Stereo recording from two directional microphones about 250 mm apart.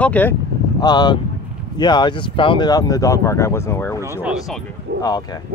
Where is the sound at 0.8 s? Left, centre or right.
Centre.